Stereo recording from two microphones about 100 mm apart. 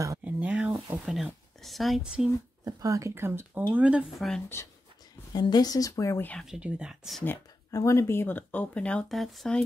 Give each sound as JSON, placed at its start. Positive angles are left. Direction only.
{"t": 0.2, "sound": "a sound", "side_deg": -10}
{"t": 2.6, "sound": "speech", "side_deg": -35}
{"t": 4.2, "sound": "speech", "side_deg": 5}
{"t": 5.3, "sound": "speech", "side_deg": 45}
{"t": 6.4, "sound": "speech", "side_deg": -5}
{"t": 7.7, "sound": "speech", "side_deg": 30}